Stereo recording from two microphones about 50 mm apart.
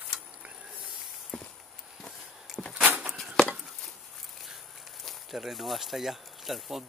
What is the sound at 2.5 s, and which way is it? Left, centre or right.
Door, centre.